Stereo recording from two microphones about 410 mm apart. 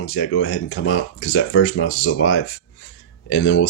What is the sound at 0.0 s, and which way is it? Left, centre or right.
Speech, left.